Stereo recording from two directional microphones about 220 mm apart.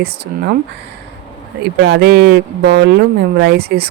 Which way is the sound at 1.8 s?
50° right (ahead or behind).